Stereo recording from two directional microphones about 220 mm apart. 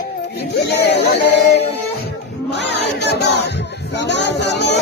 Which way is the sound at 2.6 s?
50° left (ahead or behind).